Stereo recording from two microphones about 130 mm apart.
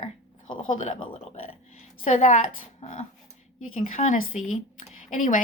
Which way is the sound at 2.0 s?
70° left (ahead or behind).